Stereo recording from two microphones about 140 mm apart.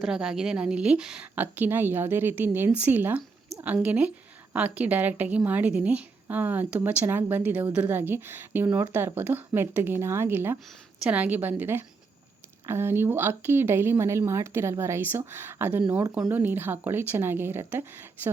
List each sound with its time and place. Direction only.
0.0 s a woman's voice: 5° right (ahead or behind)